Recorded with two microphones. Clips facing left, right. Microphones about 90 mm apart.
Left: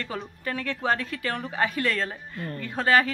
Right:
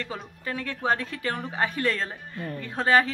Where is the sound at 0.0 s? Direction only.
15° right (ahead or behind).